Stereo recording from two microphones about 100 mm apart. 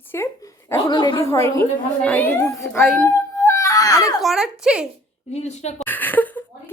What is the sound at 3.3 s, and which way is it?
Baby cry, 25° left (ahead or behind).